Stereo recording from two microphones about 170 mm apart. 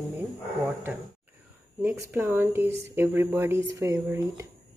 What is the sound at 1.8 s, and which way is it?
Speech, 10° right (ahead or behind).